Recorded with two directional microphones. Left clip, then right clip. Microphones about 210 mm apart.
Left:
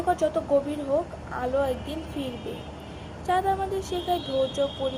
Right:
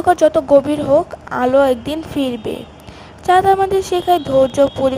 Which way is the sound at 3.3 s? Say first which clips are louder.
Right 13 dB; 55° right (ahead or behind).